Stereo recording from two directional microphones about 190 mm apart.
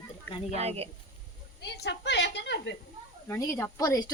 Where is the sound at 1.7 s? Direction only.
60° left (ahead or behind).